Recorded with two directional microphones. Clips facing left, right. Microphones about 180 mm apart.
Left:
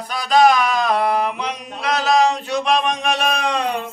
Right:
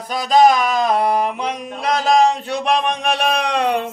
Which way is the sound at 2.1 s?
55° right (ahead or behind).